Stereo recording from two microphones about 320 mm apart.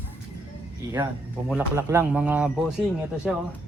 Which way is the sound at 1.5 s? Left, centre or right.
Centre.